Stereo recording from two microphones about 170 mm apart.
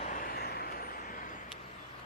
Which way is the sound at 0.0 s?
50° left (ahead or behind).